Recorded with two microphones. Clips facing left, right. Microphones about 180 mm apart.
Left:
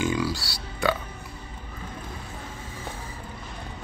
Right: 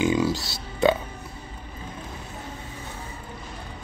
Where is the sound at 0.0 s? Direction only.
20° right (ahead or behind).